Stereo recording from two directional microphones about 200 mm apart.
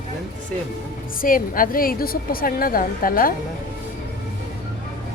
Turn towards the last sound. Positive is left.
turn(degrees=45)  # may be behind; listen again after turning